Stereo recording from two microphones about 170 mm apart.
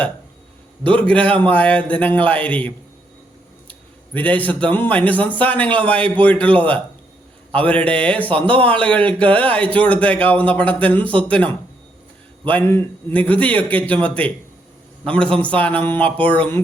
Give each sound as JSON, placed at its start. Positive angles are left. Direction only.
{"t": 0.9, "sound": "speech", "side_deg": 5}